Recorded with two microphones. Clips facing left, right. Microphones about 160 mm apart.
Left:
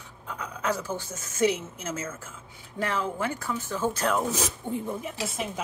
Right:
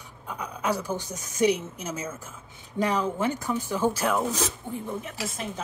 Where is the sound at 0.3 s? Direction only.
10° right (ahead or behind).